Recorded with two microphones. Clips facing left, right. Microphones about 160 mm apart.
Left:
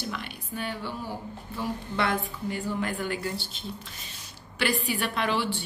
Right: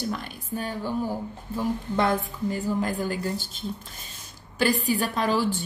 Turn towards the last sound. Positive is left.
turn(degrees=-40)  # may be behind; listen again after turning